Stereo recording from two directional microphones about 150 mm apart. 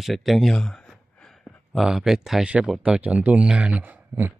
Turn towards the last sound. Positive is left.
turn(degrees=-15)  # may be behind; listen again after turning